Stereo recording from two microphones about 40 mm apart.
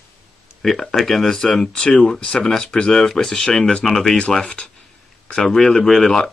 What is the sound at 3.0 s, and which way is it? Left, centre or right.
Speech, centre.